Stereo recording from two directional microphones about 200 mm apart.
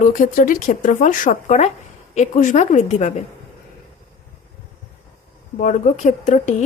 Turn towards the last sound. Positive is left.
turn(degrees=40)  # may be behind; listen again after turning